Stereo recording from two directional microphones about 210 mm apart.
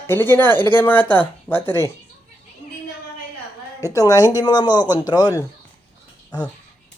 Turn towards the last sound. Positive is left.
turn(degrees=20)  # may be behind; listen again after turning